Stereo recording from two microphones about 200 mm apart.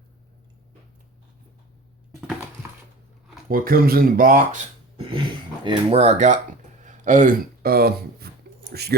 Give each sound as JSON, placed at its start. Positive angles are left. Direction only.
{"t": 3.5, "sound": "speech", "side_deg": -45}
{"t": 5.6, "sound": "speech", "side_deg": -30}